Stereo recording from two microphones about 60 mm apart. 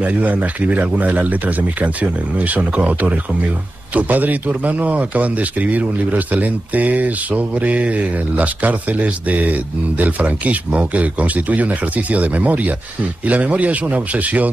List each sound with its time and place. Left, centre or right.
0.0 s a man's voice: right